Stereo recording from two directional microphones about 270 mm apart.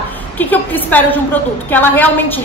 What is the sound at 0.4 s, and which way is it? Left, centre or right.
A woman's voice, centre.